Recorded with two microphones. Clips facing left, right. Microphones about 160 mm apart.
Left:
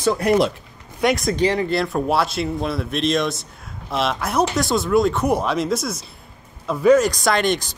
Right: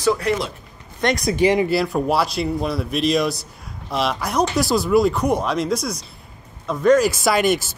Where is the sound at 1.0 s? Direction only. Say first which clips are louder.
Left 1 dB; 5° left (ahead or behind).